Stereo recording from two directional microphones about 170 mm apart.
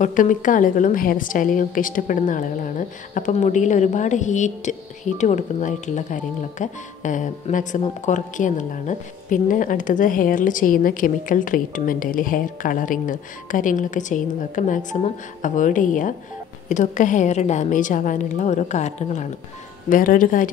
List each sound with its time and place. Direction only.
0.0 s a woman's voice: 50° left (ahead or behind)
19.9 s a woman's voice: 55° left (ahead or behind)